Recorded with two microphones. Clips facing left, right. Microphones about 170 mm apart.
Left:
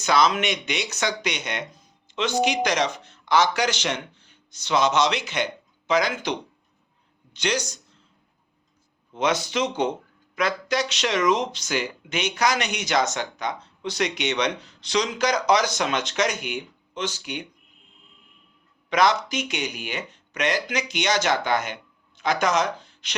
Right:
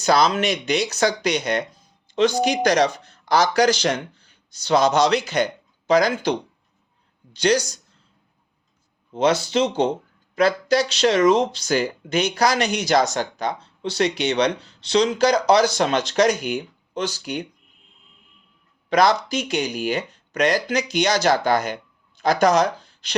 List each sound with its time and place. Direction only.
0.0 s speech: 35° right (ahead or behind)
7.3 s speech: 35° right (ahead or behind)
9.1 s speech: 30° right (ahead or behind)
18.9 s speech: 35° right (ahead or behind)